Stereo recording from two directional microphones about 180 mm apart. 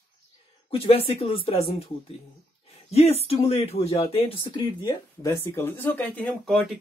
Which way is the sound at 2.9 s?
35° left (ahead or behind).